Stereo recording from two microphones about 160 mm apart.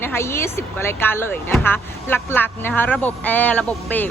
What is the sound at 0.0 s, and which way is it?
A woman's voice, 15° left (ahead or behind).